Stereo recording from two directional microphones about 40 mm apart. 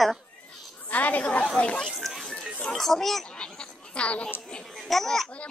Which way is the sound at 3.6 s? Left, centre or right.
Left.